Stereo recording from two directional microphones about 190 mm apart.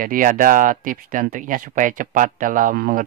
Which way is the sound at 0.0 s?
45° right (ahead or behind).